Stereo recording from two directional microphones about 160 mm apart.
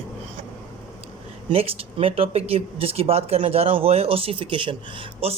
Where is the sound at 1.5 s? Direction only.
35° right (ahead or behind).